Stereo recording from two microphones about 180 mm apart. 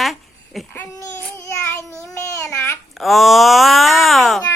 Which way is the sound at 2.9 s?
Centre (ahead or behind).